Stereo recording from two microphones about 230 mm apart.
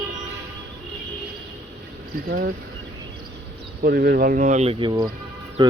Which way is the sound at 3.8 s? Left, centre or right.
Right.